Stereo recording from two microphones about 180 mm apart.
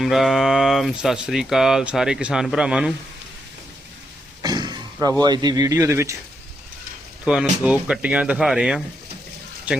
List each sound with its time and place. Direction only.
0.0 s speech: centre (ahead or behind)
4.4 s a sound: 25° right (ahead or behind)
5.2 s speech: 25° right (ahead or behind)
7.3 s speech: 5° right (ahead or behind)